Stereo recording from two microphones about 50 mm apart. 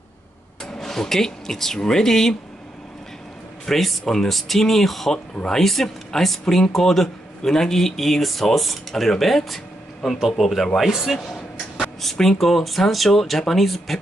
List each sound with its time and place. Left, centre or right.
0.7 s speech: centre
3.6 s speech: centre
5.3 s speech: centre
5.6 s speech: centre
11.8 s speech: centre